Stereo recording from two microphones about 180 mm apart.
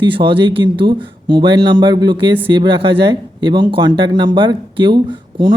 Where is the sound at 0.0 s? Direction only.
30° right (ahead or behind).